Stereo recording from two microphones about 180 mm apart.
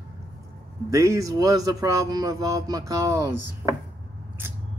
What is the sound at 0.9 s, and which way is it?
Speech, 15° right (ahead or behind).